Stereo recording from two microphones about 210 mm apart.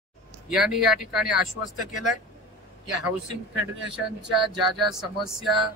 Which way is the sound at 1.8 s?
35° left (ahead or behind).